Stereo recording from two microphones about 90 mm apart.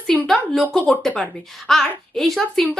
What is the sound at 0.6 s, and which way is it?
A woman's voice, 15° left (ahead or behind).